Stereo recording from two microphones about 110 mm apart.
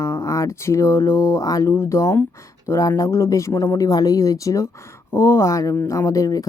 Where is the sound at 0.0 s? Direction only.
25° left (ahead or behind).